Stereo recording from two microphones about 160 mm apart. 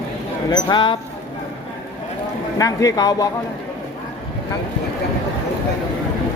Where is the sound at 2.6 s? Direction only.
20° left (ahead or behind).